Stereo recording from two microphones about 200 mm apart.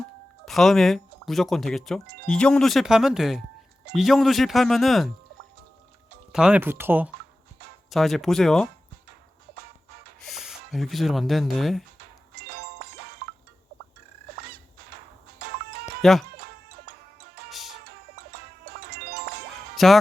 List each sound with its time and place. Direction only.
0.4 s speech: centre (ahead or behind)
6.3 s speech: 5° right (ahead or behind)
7.9 s speech: centre (ahead or behind)
10.2 s speech: centre (ahead or behind)
12.3 s music: 55° right (ahead or behind)
15.4 s music: 50° right (ahead or behind)
16.0 s speech: centre (ahead or behind)
16.4 s music: 50° right (ahead or behind)
19.7 s speech: centre (ahead or behind)